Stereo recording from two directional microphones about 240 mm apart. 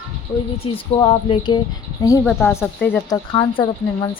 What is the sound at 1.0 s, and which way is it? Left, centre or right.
A woman's voice, centre.